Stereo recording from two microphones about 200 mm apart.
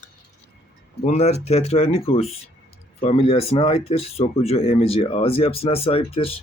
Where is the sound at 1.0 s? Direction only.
35° left (ahead or behind).